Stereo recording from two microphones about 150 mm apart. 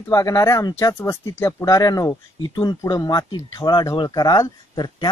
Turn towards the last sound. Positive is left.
turn(degrees=25)  # may be behind; listen again after turning